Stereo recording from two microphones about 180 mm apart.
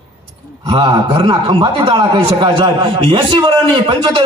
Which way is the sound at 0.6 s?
25° right (ahead or behind).